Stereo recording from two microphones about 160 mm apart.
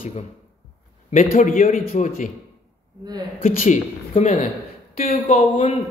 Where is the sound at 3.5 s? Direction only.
50° left (ahead or behind).